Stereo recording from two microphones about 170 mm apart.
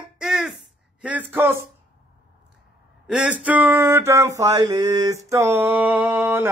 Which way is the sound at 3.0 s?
5° right (ahead or behind).